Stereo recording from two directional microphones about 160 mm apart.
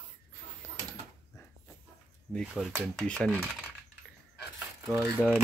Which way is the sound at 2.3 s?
5° left (ahead or behind).